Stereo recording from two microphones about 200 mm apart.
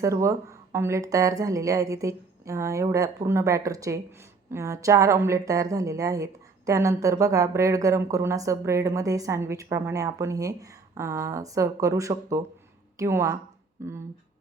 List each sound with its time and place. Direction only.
0.0 s a woman's voice: 15° right (ahead or behind)